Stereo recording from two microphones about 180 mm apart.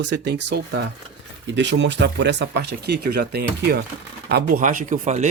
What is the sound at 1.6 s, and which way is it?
Speech, 90° right.